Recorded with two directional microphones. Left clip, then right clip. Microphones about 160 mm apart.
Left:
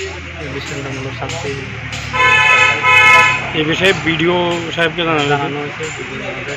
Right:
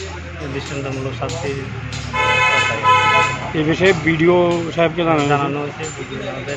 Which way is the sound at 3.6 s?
90° right.